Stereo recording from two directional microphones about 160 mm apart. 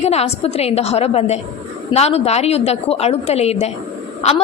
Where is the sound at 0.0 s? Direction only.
40° left (ahead or behind).